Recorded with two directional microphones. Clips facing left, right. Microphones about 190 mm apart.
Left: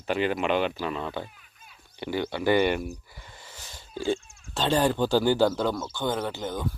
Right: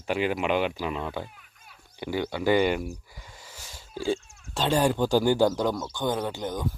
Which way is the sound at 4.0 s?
10° right (ahead or behind).